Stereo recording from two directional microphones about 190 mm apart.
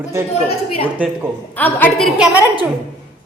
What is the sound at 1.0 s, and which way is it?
Speech, 5° right (ahead or behind).